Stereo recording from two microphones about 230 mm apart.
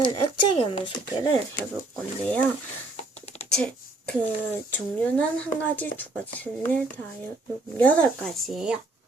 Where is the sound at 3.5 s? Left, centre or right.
Centre.